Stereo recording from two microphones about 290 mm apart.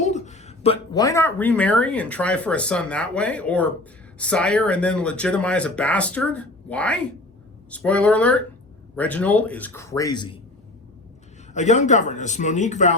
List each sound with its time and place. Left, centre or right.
0.0 s speech: left
11.5 s speech: left